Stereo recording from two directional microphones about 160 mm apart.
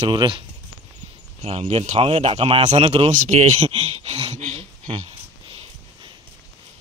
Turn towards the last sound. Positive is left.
turn(degrees=-35)  # may be behind; listen again after turning